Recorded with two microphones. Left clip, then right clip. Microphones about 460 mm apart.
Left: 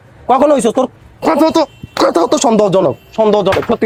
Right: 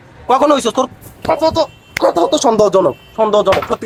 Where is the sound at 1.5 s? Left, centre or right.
Left.